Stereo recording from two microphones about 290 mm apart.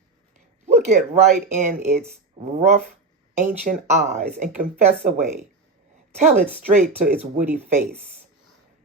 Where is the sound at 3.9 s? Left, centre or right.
Right.